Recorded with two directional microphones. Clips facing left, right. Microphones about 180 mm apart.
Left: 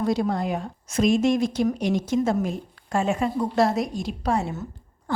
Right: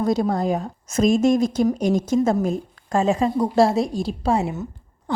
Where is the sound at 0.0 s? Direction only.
45° right (ahead or behind).